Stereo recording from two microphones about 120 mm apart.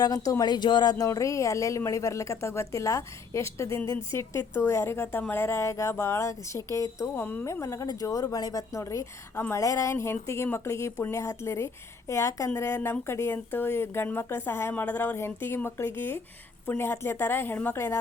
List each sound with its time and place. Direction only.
0.0 s speech: 30° left (ahead or behind)
7.2 s speech: 15° left (ahead or behind)